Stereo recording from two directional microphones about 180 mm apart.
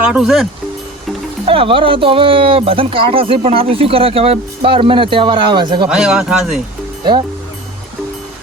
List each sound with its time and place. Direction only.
0.0 s speech: 5° right (ahead or behind)
1.5 s speech: 30° right (ahead or behind)
5.9 s speech: 5° right (ahead or behind)